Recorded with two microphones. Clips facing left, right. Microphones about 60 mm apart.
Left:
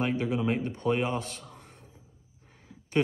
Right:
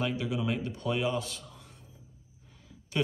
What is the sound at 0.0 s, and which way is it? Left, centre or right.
Speech, left.